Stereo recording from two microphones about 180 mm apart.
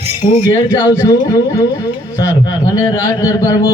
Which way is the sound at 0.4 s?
25° left (ahead or behind).